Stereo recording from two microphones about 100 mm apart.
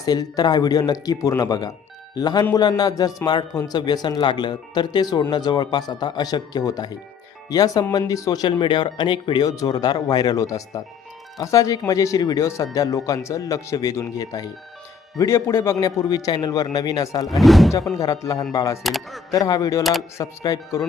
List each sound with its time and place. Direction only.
0.0 s speech: 40° left (ahead or behind)
17.2 s speech: centre (ahead or behind)
17.9 s speech: 35° left (ahead or behind)
18.8 s speech: centre (ahead or behind)
19.3 s speech: 40° left (ahead or behind)